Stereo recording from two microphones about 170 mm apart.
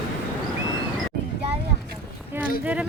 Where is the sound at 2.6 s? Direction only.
10° right (ahead or behind).